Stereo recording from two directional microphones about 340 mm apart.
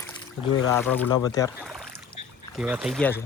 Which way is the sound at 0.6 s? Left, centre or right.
Centre.